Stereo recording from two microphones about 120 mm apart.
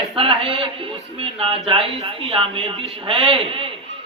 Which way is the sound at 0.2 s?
50° right (ahead or behind).